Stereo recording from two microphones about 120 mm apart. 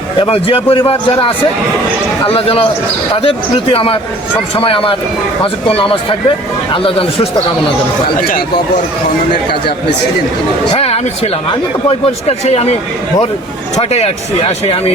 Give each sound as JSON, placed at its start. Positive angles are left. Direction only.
{"t": 0.2, "sound": "a man's voice", "side_deg": 50}
{"t": 10.8, "sound": "speech", "side_deg": 55}
{"t": 13.9, "sound": "speech", "side_deg": 60}